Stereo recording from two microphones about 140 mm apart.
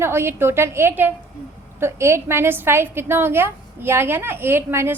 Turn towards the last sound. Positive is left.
turn(degrees=-15)  # may be behind; listen again after turning